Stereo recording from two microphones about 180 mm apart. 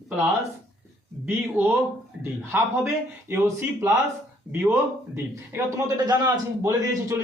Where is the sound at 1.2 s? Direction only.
10° right (ahead or behind).